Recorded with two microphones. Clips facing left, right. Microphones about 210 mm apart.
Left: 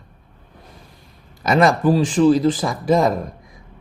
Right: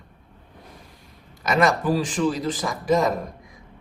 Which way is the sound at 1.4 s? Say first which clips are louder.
Left 5 dB; 35° left (ahead or behind).